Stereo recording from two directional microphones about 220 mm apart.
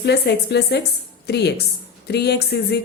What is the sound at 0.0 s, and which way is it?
A woman's voice, 50° left (ahead or behind).